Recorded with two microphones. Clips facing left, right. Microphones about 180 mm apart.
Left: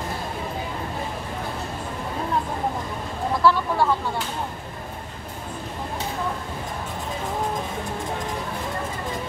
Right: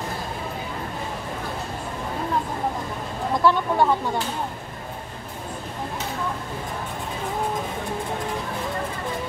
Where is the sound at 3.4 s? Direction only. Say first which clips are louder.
Right 1 dB; 20° right (ahead or behind).